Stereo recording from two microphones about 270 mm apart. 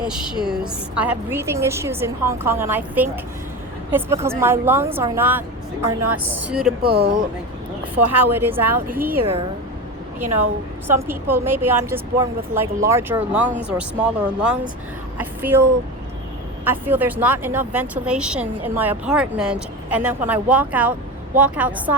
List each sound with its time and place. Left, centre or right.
0.0 s a woman's voice: centre
6.0 s a woman's voice: right
6.3 s a woman's voice: centre
6.8 s speech: right
8.2 s a woman's voice: centre
10.2 s a woman's voice: right
10.8 s a woman's voice: centre